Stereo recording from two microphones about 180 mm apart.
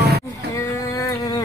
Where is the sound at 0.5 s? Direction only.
20° left (ahead or behind).